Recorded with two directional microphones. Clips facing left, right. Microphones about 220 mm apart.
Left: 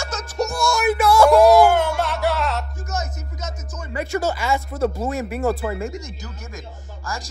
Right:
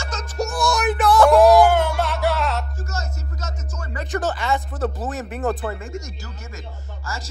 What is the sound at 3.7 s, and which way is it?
Speech, centre (ahead or behind).